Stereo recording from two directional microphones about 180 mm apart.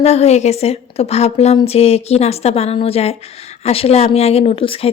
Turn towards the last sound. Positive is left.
turn(degrees=30)  # may be behind; listen again after turning